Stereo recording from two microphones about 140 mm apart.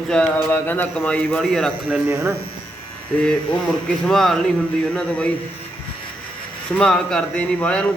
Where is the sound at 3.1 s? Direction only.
5° left (ahead or behind).